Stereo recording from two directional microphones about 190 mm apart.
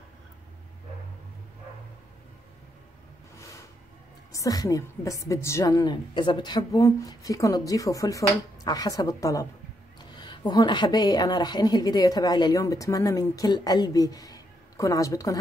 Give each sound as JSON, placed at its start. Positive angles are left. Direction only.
{"t": 4.3, "sound": "a woman's voice", "side_deg": 20}